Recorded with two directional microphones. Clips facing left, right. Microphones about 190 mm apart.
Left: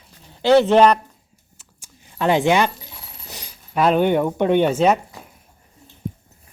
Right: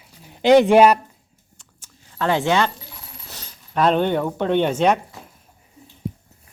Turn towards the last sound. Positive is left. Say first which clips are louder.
# left 2 dB
turn(degrees=5)  # may be behind; listen again after turning